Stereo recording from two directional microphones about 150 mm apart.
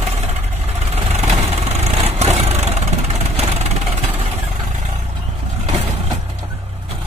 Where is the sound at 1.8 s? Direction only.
50° right (ahead or behind).